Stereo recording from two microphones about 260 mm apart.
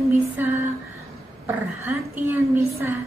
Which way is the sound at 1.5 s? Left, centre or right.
Centre.